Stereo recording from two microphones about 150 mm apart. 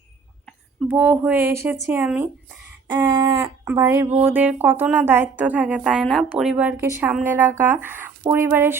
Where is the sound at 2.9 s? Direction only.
35° right (ahead or behind).